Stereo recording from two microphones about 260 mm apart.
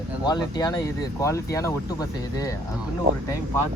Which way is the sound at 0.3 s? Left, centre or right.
Centre.